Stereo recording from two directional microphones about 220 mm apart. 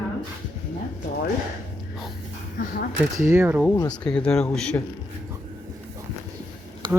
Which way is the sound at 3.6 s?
15° left (ahead or behind).